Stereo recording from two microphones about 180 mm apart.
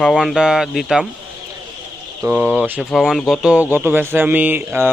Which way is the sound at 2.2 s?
10° right (ahead or behind).